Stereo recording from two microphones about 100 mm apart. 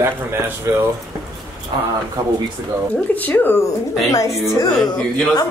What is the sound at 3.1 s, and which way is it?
Speech, 20° left (ahead or behind).